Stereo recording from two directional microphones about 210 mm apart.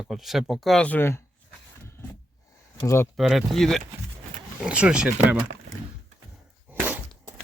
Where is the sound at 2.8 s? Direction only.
15° left (ahead or behind).